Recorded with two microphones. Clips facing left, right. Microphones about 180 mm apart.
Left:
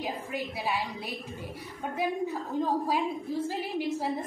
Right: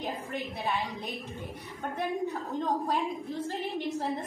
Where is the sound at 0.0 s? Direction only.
10° left (ahead or behind).